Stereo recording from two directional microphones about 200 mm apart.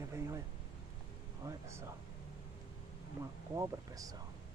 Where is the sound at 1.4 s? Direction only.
15° right (ahead or behind).